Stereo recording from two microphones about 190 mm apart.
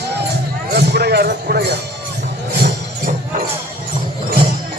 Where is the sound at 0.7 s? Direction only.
55° right (ahead or behind).